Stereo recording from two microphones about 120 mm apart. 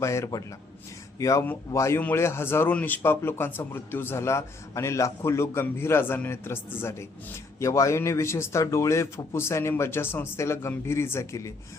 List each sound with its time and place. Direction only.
0.0 s a man's voice: 25° left (ahead or behind)